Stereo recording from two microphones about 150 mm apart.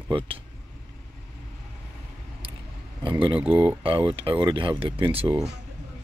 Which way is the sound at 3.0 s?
35° right (ahead or behind).